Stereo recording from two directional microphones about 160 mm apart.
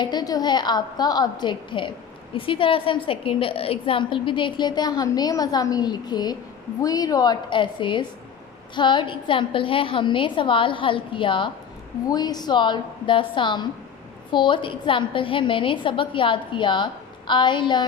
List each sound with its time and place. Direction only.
0.0 s a woman's voice: 25° left (ahead or behind)